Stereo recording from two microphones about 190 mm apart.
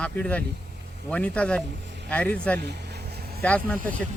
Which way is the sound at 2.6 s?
60° right (ahead or behind).